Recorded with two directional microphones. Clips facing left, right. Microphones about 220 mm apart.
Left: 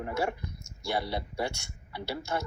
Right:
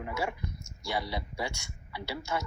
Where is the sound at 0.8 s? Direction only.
55° left (ahead or behind).